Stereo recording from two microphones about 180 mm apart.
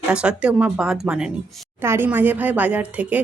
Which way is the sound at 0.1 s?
5° right (ahead or behind).